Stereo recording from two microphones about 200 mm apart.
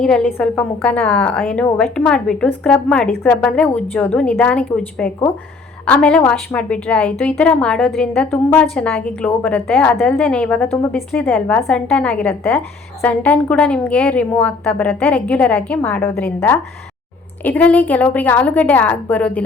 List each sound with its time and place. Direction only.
0.0 s a woman's voice: 5° left (ahead or behind)